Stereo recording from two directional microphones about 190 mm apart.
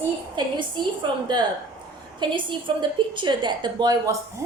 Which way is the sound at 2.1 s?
25° right (ahead or behind).